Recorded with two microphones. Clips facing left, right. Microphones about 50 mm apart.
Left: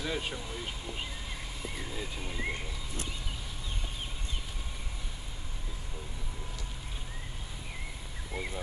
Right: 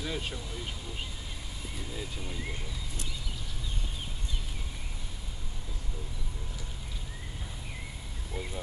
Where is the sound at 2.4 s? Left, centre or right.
Left.